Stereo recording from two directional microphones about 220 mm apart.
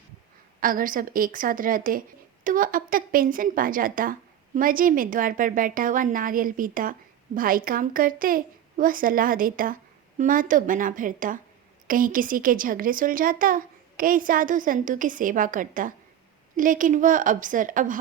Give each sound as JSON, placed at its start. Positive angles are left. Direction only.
{"t": 0.6, "sound": "a woman's voice", "side_deg": -40}